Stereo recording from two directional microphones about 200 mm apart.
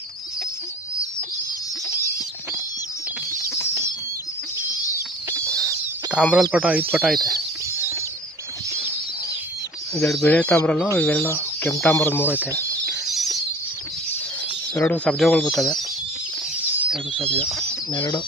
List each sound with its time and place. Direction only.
6.2 s speech: 5° right (ahead or behind)
10.1 s speech: 5° left (ahead or behind)
12.3 s speech: 10° right (ahead or behind)
12.5 s a sound: centre (ahead or behind)
14.8 s speech: 5° left (ahead or behind)
16.7 s a sound: 5° right (ahead or behind)
17.2 s speech: 30° right (ahead or behind)
17.5 s speech: centre (ahead or behind)
17.9 s speech: 25° left (ahead or behind)